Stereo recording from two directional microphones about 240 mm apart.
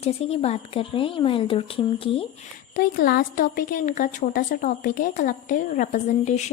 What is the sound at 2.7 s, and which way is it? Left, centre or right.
A woman's voice, left.